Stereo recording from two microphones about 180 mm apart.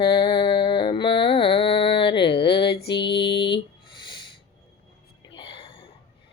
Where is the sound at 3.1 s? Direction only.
70° left (ahead or behind).